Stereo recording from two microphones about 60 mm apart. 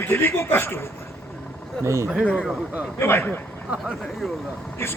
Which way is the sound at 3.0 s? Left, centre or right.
Left.